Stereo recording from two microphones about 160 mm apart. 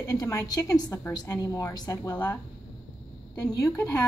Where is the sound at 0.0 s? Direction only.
20° left (ahead or behind).